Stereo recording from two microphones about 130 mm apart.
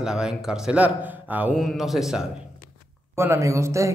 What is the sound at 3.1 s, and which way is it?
Speech, 20° right (ahead or behind).